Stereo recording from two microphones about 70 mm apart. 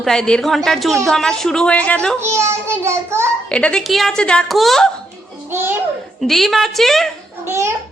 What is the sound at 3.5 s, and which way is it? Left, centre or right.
Speech, centre.